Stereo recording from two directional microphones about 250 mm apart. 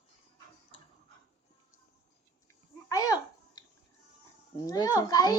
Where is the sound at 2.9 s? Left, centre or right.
Centre.